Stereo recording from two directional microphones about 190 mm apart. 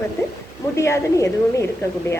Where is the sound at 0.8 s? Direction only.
15° left (ahead or behind).